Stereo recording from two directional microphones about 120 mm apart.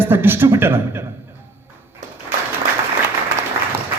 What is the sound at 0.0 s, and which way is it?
A man's voice, 20° right (ahead or behind).